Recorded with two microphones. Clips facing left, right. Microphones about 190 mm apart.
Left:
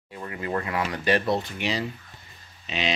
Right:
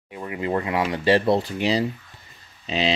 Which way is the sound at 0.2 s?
20° right (ahead or behind).